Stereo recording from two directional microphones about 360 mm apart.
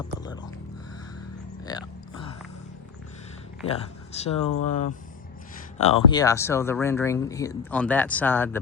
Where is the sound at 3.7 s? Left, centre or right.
Centre.